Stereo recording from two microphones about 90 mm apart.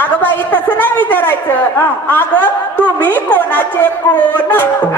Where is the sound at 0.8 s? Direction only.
20° left (ahead or behind).